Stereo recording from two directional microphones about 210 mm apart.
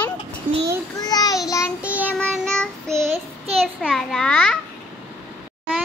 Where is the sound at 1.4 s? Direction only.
15° left (ahead or behind).